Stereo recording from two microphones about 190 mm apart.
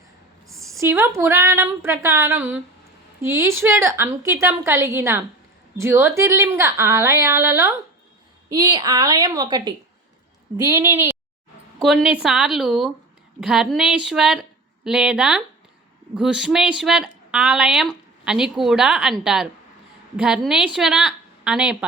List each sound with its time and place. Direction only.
0.4 s a sound: centre (ahead or behind)
0.8 s a woman's voice: 15° right (ahead or behind)
11.8 s a woman's voice: centre (ahead or behind)